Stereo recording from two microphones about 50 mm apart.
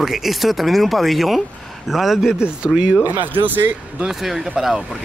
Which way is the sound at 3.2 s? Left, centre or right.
Right.